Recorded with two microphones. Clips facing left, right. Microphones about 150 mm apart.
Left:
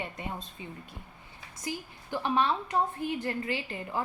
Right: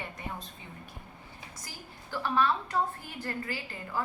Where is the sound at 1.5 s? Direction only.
20° left (ahead or behind).